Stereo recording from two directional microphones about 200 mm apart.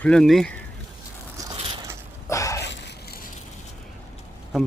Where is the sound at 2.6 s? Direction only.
60° left (ahead or behind).